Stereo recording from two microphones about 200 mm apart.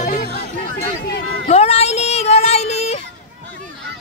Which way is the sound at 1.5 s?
30° left (ahead or behind).